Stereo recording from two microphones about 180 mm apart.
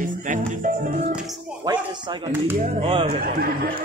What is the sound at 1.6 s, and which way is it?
Speech, 25° right (ahead or behind).